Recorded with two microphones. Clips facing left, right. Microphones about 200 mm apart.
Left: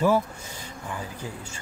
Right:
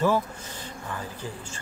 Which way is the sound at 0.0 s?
10° left (ahead or behind).